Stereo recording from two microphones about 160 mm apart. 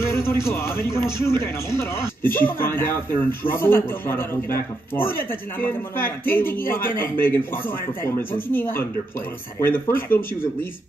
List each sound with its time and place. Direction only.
0.1 s a man's voice: 15° left (ahead or behind)